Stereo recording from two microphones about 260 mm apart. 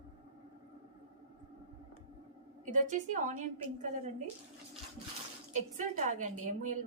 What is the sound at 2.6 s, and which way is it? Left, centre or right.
A woman's voice, right.